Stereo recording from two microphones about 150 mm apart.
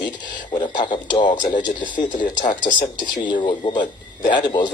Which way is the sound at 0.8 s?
30° left (ahead or behind).